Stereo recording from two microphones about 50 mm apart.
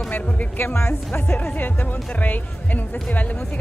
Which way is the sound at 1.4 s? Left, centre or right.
Left.